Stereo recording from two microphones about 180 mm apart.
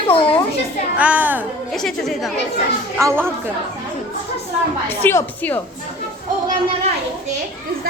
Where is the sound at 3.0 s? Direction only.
15° right (ahead or behind).